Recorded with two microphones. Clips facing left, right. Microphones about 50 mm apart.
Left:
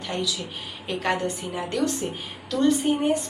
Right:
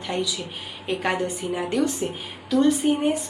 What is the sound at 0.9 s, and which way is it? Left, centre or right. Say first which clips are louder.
A woman's voice: right 1 dB; centre.